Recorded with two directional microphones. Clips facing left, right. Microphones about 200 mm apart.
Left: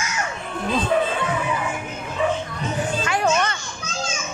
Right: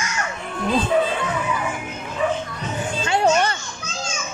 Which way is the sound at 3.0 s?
25° right (ahead or behind).